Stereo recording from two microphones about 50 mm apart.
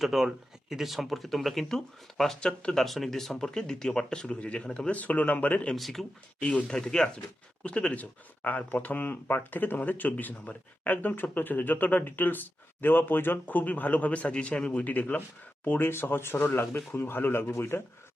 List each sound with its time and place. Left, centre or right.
0.0 s speech: centre
2.8 s speech: centre
4.4 s speech: left
5.7 s speech: centre
6.4 s speech: centre
7.6 s speech: left
8.4 s speech: left
15.9 s speech: left